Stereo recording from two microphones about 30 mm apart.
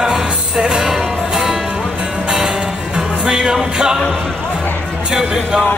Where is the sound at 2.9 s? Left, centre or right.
Right.